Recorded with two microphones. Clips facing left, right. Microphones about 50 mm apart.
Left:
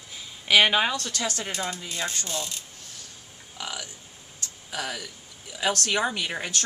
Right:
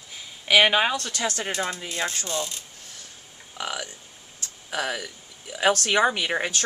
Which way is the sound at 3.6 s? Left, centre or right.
Right.